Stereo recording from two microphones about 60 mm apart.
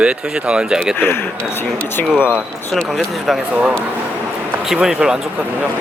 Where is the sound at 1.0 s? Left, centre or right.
Left.